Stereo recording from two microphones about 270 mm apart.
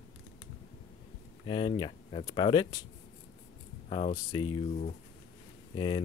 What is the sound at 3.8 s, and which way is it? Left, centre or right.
Speech, left.